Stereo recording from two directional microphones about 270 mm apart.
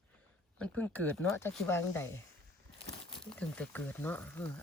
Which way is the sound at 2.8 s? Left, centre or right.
Centre.